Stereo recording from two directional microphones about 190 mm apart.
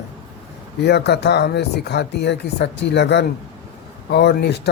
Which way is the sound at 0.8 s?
60° left (ahead or behind).